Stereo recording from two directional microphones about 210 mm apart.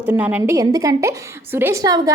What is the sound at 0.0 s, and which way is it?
A woman's voice, 5° right (ahead or behind).